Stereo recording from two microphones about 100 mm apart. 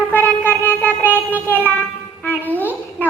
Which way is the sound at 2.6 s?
20° left (ahead or behind).